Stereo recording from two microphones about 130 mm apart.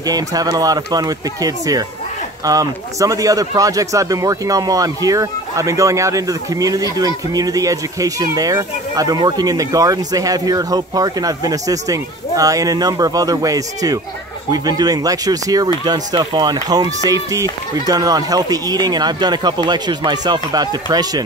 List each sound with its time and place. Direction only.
0.0 s speech: 30° right (ahead or behind)